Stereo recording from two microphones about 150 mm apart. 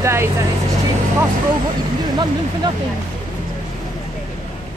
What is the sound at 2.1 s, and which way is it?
Speech, 30° right (ahead or behind).